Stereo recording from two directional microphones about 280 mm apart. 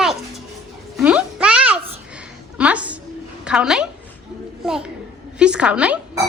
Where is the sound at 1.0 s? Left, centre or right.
Centre.